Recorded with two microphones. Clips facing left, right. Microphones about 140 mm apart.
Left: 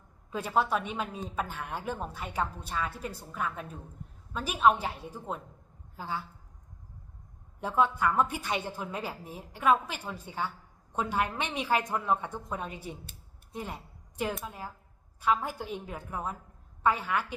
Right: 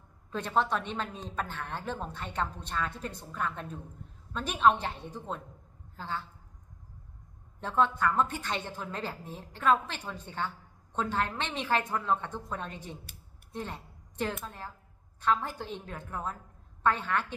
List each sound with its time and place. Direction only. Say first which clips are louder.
0.3 s speech: left 1 dB; 10° left (ahead or behind)
7.6 s a woman's voice: left 1 dB; 10° left (ahead or behind)